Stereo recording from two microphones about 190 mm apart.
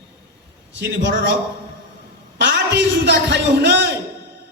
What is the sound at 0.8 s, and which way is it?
Speech, 70° right (ahead or behind).